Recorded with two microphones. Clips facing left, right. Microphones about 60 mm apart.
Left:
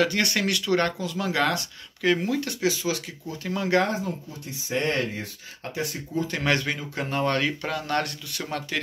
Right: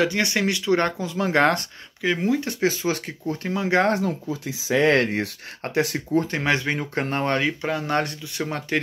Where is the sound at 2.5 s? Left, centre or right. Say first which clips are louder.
Right 3 dB; right.